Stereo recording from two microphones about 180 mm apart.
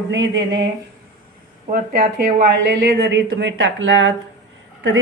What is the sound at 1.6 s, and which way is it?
Speech, 50° right (ahead or behind).